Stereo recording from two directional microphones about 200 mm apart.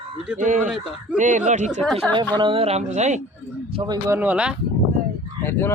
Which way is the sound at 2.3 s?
25° right (ahead or behind).